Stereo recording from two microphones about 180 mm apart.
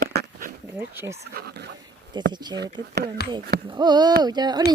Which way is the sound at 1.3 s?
60° right (ahead or behind).